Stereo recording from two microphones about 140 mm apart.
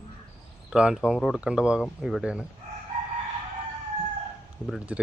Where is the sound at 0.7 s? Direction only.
5° right (ahead or behind).